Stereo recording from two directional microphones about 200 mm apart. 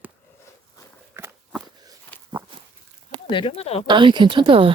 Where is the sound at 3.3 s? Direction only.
30° left (ahead or behind).